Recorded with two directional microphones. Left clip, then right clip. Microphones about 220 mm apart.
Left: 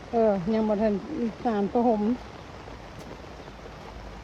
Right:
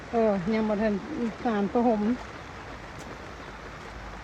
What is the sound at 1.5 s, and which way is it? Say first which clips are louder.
Speech: left 1 dB; 35° left (ahead or behind).